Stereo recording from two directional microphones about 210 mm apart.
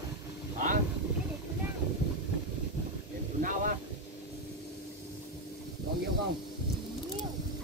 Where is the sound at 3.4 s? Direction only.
40° right (ahead or behind).